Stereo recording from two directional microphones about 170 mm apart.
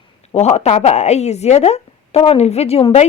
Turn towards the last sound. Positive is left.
turn(degrees=35)  # may be behind; listen again after turning